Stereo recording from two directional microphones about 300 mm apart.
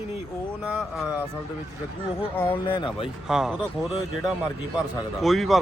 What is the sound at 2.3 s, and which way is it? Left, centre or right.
Speech, centre.